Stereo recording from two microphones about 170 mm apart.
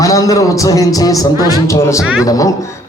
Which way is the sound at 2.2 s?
20° left (ahead or behind).